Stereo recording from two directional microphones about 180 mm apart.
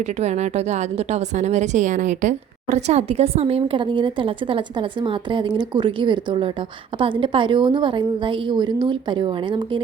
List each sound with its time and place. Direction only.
0.0 s a woman's voice: 40° right (ahead or behind)